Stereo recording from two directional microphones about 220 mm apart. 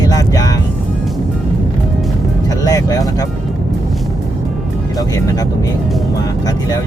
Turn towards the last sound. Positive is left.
turn(degrees=15)  # may be behind; listen again after turning